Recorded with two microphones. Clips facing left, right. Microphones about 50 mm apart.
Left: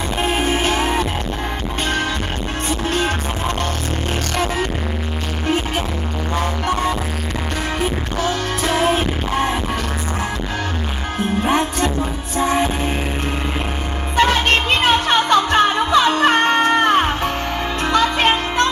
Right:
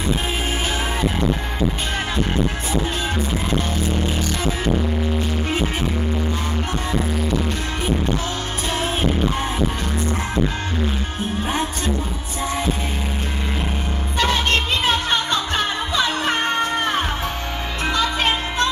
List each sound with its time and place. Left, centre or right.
0.5 s music: left
8.6 s music: left
11.4 s music: left
14.8 s music: left